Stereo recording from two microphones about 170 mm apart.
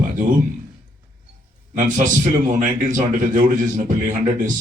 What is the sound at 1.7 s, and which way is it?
A man's voice, 50° right (ahead or behind).